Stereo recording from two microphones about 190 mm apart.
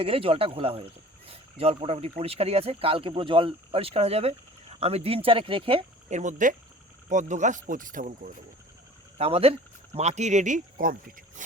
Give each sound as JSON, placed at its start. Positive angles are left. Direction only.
{"t": 0.0, "sound": "speech", "side_deg": -30}
{"t": 9.1, "sound": "speech", "side_deg": -30}
{"t": 11.4, "sound": "boat", "side_deg": -40}